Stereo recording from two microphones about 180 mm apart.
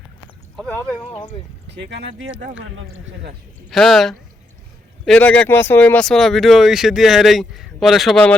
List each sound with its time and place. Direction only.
0.5 s speech: 5° left (ahead or behind)
1.1 s speech: 30° left (ahead or behind)
1.7 s speech: 75° right (ahead or behind)
3.7 s speech: centre (ahead or behind)